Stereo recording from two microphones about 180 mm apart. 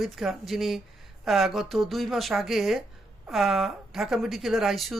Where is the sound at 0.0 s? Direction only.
Centre (ahead or behind).